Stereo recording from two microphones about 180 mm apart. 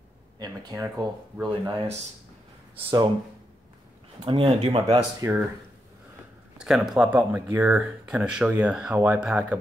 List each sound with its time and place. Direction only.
0.4 s speech: 20° right (ahead or behind)
4.2 s speech: 30° right (ahead or behind)
4.8 s speech: 20° right (ahead or behind)
6.6 s speech: centre (ahead or behind)